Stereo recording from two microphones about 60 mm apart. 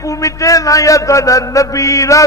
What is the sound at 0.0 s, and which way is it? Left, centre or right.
A man's voice, left.